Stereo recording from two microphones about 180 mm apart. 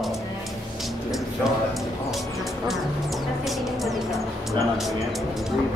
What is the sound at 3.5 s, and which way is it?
Music, centre (ahead or behind).